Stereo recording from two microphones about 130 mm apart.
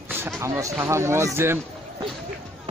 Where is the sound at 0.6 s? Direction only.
20° right (ahead or behind).